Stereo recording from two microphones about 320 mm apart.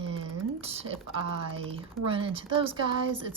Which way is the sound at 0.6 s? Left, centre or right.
Centre.